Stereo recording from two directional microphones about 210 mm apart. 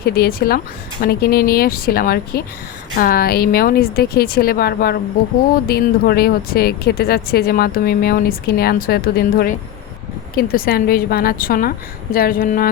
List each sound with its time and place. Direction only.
0.0 s speech: 45° left (ahead or behind)